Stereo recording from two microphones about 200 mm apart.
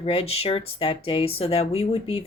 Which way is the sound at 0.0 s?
30° left (ahead or behind).